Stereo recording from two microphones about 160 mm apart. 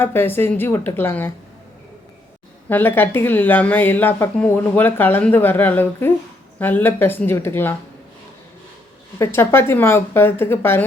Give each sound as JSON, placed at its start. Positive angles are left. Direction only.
{"t": 0.0, "sound": "a woman's voice", "side_deg": 15}
{"t": 2.6, "sound": "a woman's voice", "side_deg": 10}
{"t": 9.1, "sound": "a woman's voice", "side_deg": 15}